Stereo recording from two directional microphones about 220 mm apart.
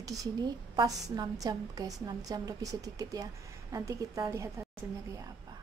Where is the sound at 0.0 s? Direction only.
15° right (ahead or behind).